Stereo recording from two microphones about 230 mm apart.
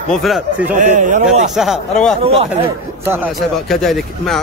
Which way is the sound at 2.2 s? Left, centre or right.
Right.